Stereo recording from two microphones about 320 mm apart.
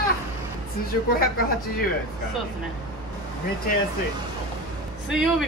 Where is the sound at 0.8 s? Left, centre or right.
Left.